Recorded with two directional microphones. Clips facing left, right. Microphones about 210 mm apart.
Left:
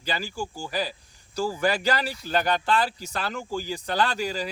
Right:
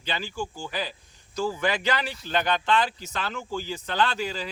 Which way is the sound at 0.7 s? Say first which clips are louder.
Left 3 dB; 40° left (ahead or behind).